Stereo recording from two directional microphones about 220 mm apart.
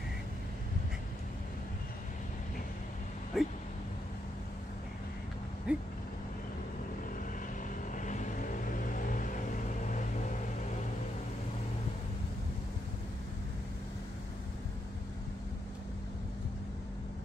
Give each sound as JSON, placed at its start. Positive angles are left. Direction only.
{"t": 3.3, "sound": "a sound", "side_deg": 0}
{"t": 5.7, "sound": "vehicle", "side_deg": -5}
{"t": 7.9, "sound": "vehicle", "side_deg": 35}